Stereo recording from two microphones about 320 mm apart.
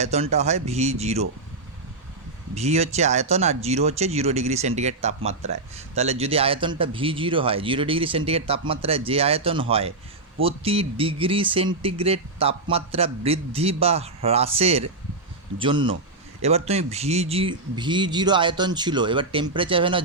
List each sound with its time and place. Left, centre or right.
0.0 s speech: right
2.6 s speech: centre